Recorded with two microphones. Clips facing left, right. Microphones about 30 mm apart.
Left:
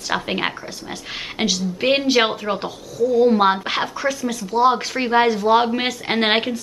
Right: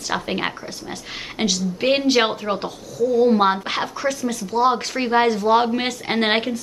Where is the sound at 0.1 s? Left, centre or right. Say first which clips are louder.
Left 2 dB; centre.